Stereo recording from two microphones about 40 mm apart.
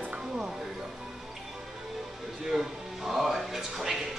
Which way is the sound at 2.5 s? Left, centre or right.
Centre.